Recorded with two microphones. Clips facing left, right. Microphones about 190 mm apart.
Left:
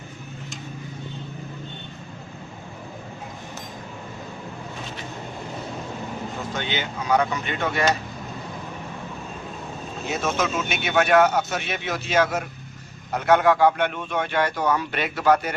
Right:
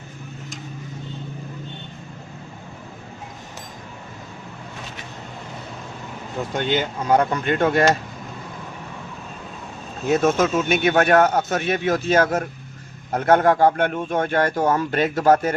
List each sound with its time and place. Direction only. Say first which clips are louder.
6.6 s a man's voice: right 8 dB; 50° right (ahead or behind)
10.1 s a man's voice: right 7 dB; 50° right (ahead or behind)